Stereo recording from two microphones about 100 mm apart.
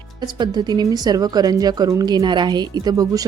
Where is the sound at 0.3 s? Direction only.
45° right (ahead or behind).